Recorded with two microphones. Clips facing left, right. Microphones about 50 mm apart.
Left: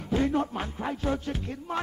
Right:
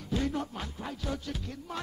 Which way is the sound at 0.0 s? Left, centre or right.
Left.